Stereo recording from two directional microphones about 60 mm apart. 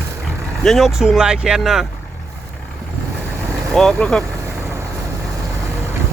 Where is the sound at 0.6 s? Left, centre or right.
Centre.